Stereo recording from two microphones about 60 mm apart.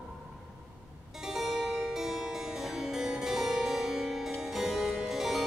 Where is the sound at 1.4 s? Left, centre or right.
Centre.